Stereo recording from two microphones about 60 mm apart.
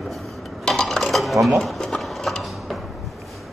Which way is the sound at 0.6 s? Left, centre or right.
Centre.